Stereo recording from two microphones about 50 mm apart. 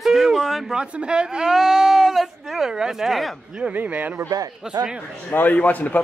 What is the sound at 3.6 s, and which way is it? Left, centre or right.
Speech, right.